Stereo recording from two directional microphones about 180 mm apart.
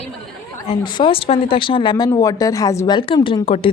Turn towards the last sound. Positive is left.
turn(degrees=30)  # may be behind; listen again after turning